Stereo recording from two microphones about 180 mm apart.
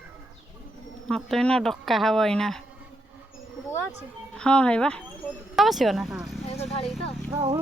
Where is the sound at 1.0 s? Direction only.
Centre (ahead or behind).